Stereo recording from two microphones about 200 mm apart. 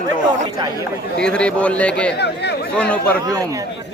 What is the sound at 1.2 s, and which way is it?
Speech, 5° left (ahead or behind).